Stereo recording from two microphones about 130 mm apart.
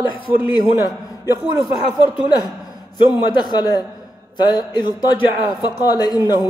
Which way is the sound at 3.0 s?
35° left (ahead or behind).